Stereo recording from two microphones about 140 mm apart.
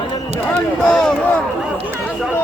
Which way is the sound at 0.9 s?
5° left (ahead or behind).